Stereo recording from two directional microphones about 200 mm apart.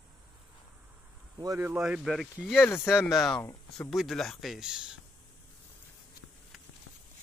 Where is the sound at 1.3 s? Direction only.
15° right (ahead or behind).